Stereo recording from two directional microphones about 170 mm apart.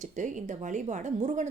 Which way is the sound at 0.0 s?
45° right (ahead or behind).